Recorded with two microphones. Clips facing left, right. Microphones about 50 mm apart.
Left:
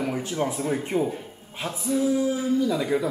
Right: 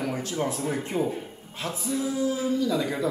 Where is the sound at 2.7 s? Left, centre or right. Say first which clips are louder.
Left 2 dB; centre.